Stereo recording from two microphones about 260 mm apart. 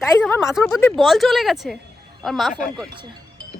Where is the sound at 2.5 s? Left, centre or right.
Left.